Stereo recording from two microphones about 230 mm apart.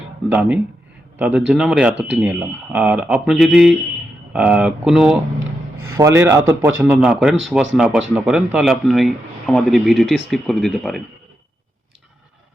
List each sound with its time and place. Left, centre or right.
0.3 s a man's voice: centre
5.4 s a sound: right
6.0 s a man's voice: centre